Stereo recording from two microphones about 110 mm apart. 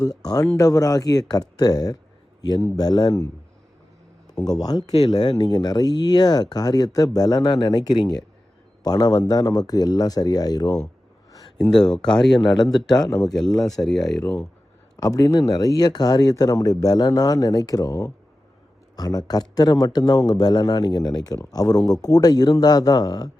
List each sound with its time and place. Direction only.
0.5 s speech: 35° left (ahead or behind)
4.3 s speech: 35° left (ahead or behind)
11.3 s a sound: 30° left (ahead or behind)
11.9 s speech: 5° left (ahead or behind)
12.5 s speech: 40° left (ahead or behind)
13.8 s speech: centre (ahead or behind)
14.9 s speech: 35° left (ahead or behind)